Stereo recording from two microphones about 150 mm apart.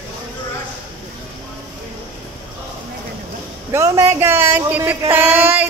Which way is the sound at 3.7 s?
20° right (ahead or behind).